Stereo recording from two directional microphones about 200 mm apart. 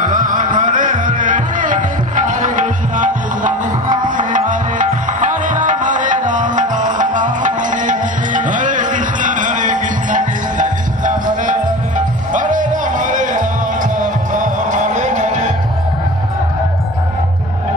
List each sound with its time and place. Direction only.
0.0 s music: 40° right (ahead or behind)